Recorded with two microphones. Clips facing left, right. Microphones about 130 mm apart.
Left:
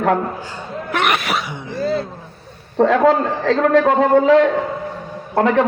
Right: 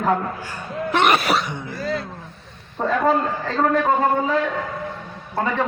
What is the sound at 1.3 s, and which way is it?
Speech, 5° left (ahead or behind).